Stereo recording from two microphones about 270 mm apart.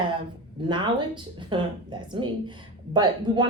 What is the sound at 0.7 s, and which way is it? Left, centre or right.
Speech, centre.